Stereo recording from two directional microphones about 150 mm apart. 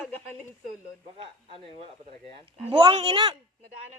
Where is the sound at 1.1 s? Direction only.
35° right (ahead or behind).